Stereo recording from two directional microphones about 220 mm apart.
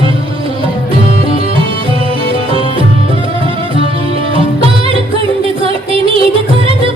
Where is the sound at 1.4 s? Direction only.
25° right (ahead or behind).